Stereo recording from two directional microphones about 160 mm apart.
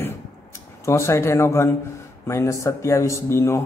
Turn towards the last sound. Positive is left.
turn(degrees=15)  # may be behind; listen again after turning